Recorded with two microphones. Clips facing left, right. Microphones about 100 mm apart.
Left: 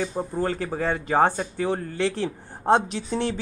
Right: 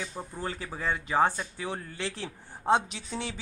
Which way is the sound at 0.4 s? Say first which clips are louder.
Left 9 dB; 50° left (ahead or behind).